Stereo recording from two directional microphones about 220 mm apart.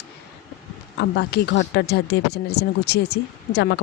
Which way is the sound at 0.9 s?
50° left (ahead or behind).